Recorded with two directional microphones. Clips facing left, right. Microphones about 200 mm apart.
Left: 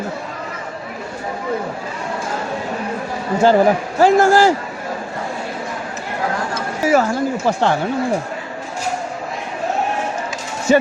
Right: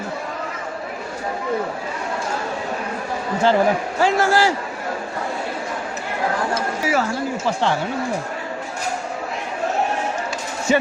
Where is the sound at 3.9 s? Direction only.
45° left (ahead or behind).